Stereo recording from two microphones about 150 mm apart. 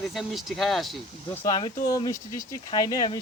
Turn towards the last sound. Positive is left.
turn(degrees=25)  # may be behind; listen again after turning